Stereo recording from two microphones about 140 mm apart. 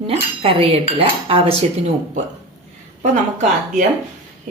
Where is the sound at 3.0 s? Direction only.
55° right (ahead or behind).